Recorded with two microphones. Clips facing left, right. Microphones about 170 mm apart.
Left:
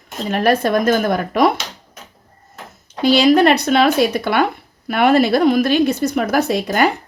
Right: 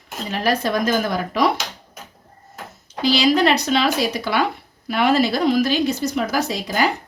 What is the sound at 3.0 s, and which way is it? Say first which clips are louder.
A woman's voice: left 5 dB; 55° left (ahead or behind).